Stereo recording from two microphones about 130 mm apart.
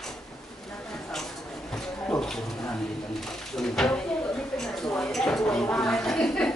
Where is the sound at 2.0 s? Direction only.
5° left (ahead or behind).